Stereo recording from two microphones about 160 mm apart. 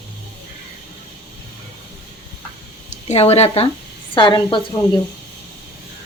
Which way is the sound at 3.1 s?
40° left (ahead or behind).